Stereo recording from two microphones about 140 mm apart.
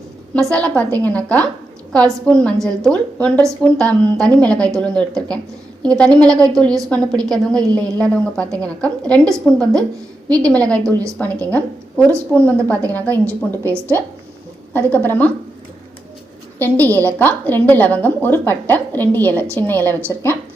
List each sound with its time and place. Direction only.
0.5 s a woman's voice: 10° left (ahead or behind)
6.1 s a woman's voice: 25° right (ahead or behind)
6.5 s a woman's voice: 5° left (ahead or behind)
16.6 s a woman's voice: 15° left (ahead or behind)